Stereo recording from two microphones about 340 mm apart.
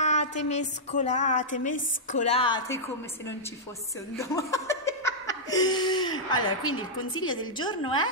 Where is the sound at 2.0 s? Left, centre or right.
Left.